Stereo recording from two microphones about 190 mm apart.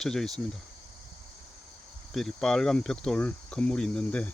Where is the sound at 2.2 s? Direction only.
5° left (ahead or behind).